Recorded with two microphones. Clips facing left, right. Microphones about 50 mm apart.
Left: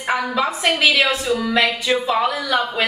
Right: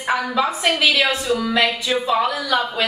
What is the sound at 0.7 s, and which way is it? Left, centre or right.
Speech, left.